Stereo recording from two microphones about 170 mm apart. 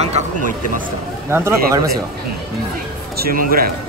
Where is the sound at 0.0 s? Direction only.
40° right (ahead or behind).